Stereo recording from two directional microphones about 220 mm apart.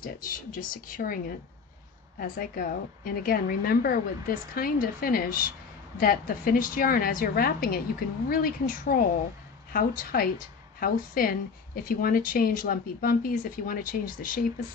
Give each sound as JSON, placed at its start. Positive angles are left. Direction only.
{"t": 0.0, "sound": "speech", "side_deg": 40}